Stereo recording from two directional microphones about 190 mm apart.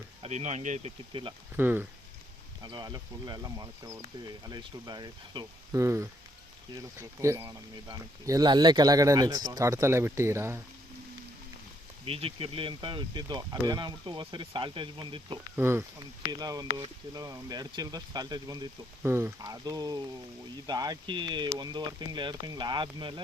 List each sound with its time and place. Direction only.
0.2 s speech: 35° right (ahead or behind)
1.5 s speech: 10° right (ahead or behind)
2.6 s speech: 25° right (ahead or behind)
12.0 s speech: 30° right (ahead or behind)
15.5 s speech: 15° right (ahead or behind)